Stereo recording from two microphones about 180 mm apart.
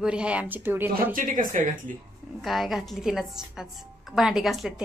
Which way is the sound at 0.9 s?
50° right (ahead or behind).